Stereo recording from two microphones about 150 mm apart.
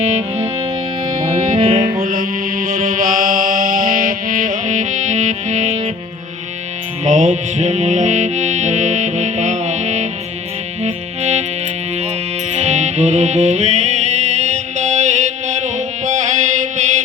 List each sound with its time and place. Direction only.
1.3 s music: 40° right (ahead or behind)
2.0 s music: 70° right (ahead or behind); by 5.9 s 45° right (ahead or behind)
7.0 s music: 55° right (ahead or behind)
12.5 s music: 50° right (ahead or behind)